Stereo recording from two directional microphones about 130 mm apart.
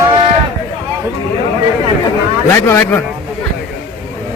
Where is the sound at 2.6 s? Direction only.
20° left (ahead or behind).